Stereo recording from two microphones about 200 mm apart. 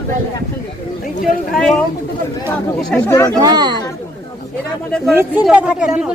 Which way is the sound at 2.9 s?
10° left (ahead or behind).